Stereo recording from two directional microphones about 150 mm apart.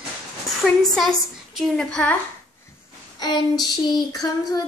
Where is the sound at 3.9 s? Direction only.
25° left (ahead or behind).